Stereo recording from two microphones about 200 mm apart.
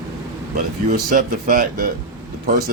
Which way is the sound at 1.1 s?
40° right (ahead or behind).